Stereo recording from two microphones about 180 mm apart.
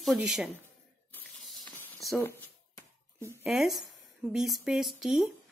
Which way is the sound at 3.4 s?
Centre (ahead or behind).